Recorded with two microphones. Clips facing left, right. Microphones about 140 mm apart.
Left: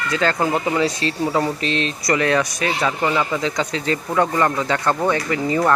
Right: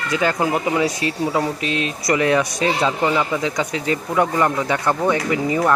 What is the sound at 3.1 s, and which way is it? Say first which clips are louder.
Speech: right 1 dB; 10° right (ahead or behind).